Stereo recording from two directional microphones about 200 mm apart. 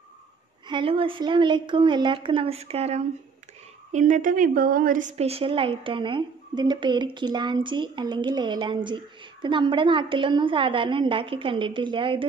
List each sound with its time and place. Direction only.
0.7 s a woman's voice: 25° right (ahead or behind)